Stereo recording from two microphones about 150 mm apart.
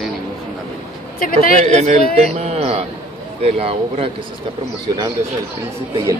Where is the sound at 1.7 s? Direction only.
50° right (ahead or behind).